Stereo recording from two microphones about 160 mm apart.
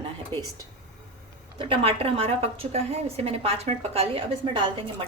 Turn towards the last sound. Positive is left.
turn(degrees=-30)  # may be behind; listen again after turning